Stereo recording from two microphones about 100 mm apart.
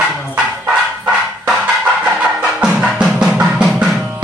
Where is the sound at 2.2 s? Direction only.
10° right (ahead or behind).